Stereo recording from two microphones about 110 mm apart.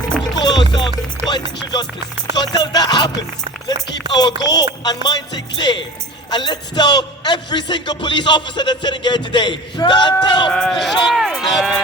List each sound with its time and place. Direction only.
0.3 s music: 40° left (ahead or behind)
2.3 s music: 40° left (ahead or behind)
4.1 s music: 40° left (ahead or behind)
5.0 s a man's voice: 40° left (ahead or behind)
10.5 s speech: 5° left (ahead or behind)